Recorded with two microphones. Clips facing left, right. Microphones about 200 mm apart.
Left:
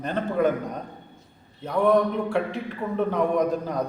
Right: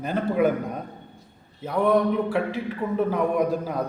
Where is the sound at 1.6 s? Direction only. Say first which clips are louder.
Even; 5° right (ahead or behind).